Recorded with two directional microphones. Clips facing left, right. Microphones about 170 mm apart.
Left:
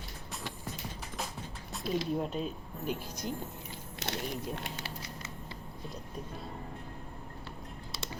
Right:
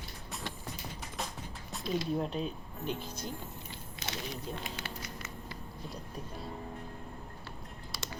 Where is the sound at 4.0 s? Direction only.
70° left (ahead or behind).